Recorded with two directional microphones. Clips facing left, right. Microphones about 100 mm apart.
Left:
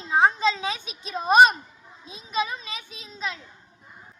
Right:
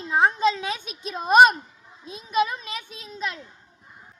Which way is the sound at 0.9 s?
50° right (ahead or behind).